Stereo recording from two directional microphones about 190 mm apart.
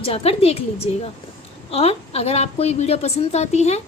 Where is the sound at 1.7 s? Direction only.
30° left (ahead or behind).